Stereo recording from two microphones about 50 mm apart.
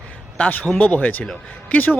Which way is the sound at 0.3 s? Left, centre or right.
Left.